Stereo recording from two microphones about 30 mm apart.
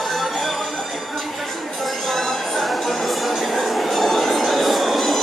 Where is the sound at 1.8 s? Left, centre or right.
Centre.